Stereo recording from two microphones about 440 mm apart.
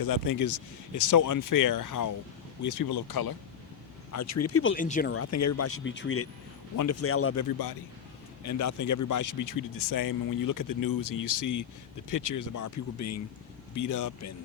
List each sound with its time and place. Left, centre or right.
0.0 s speech: left
4.1 s speech: left
4.7 s speech: centre
5.1 s speech: left
8.4 s speech: left